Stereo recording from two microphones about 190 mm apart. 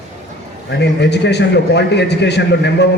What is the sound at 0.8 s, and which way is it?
A man's voice, 65° left (ahead or behind).